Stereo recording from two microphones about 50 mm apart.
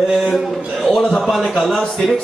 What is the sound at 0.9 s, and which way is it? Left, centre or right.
Speech, centre.